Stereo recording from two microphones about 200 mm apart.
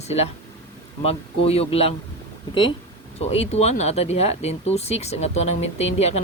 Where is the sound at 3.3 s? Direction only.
30° left (ahead or behind).